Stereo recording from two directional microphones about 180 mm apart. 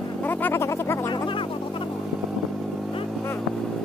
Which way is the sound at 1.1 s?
30° left (ahead or behind).